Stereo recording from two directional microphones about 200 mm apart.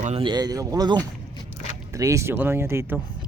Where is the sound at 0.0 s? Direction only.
30° right (ahead or behind).